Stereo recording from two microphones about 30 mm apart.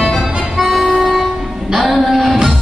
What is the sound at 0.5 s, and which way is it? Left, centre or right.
Music, centre.